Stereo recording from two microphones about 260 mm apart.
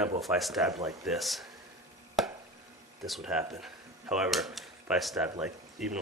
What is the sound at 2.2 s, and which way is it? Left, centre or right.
Chop, centre.